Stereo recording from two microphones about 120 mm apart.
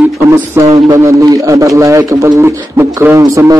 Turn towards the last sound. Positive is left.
turn(degrees=-25)  # may be behind; listen again after turning